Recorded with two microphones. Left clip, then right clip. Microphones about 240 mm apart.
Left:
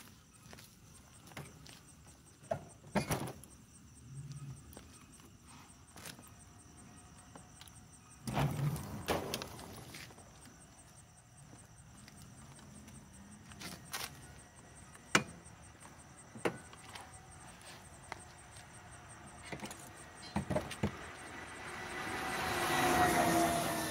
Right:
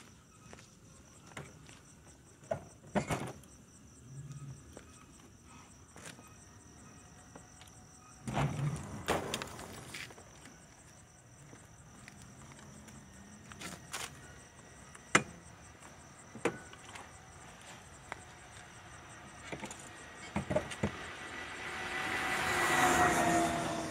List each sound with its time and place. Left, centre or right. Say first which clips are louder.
1.4 s vehicle: right 2 dB; centre
2.5 s horse: right 1 dB; centre
3.1 s a sound: right 1 dB; centre
8.3 s vehicle: right 1 dB; centre
9.0 s vehicle: right 2 dB; right
13.6 s walk: right 1 dB; centre
18.1 s a sound: right 2 dB; centre
18.8 s vehicle: right 3 dB; right
20.3 s vehicle: right 3 dB; centre
20.9 s vehicle: right 4 dB; right
23.2 s train: right 1 dB; centre
23.5 s train: even; left